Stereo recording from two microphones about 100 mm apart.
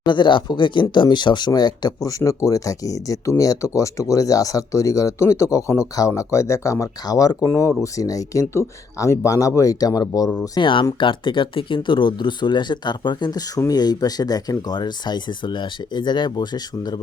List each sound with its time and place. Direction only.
0.0 s speech: 50° left (ahead or behind)
2.0 s speech: 35° left (ahead or behind)
10.6 s speech: 55° left (ahead or behind)